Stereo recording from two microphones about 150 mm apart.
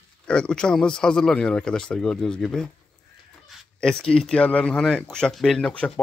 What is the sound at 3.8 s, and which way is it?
Speech, 5° left (ahead or behind).